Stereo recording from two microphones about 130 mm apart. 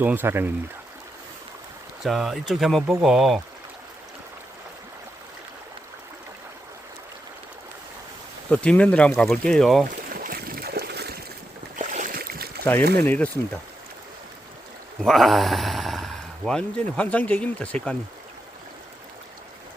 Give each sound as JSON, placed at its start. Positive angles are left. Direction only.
{"t": 0.0, "sound": "speech", "side_deg": -15}
{"t": 2.0, "sound": "speech", "side_deg": 0}
{"t": 8.4, "sound": "speech", "side_deg": 10}
{"t": 11.8, "sound": "boat", "side_deg": -85}
{"t": 12.6, "sound": "speech", "side_deg": 15}
{"t": 15.0, "sound": "speech", "side_deg": 0}